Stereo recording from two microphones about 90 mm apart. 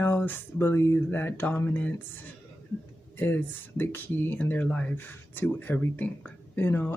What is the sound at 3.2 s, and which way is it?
Speech, 20° left (ahead or behind).